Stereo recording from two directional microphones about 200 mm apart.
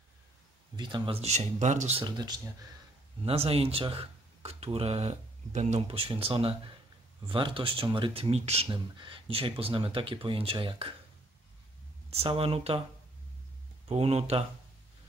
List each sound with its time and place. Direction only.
0.7 s speech: 25° right (ahead or behind)
12.1 s speech: 30° right (ahead or behind)
13.8 s speech: 30° right (ahead or behind)